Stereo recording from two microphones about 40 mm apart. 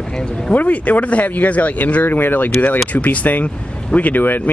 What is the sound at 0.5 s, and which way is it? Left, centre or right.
Speech, left.